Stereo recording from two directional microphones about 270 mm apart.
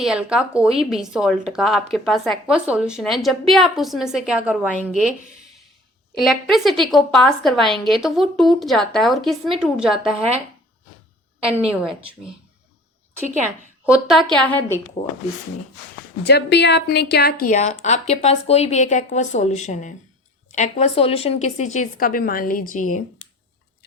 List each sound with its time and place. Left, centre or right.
0.0 s speech: centre
6.1 s speech: centre
11.4 s speech: centre
13.8 s speech: centre
16.2 s a woman's voice: left